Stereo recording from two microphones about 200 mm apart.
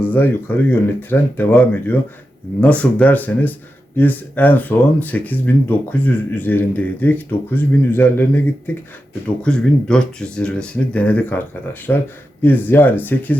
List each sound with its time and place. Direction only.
0.0 s speech: 10° left (ahead or behind)